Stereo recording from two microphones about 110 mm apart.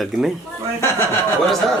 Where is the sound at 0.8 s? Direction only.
25° left (ahead or behind).